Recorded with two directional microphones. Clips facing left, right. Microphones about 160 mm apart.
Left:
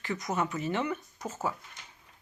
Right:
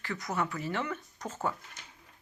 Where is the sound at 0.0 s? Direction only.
20° left (ahead or behind).